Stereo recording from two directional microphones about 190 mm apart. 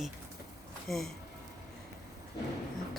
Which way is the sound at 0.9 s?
Centre (ahead or behind).